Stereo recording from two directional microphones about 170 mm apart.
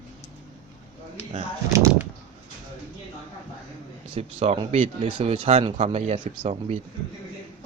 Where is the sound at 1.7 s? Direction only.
15° right (ahead or behind).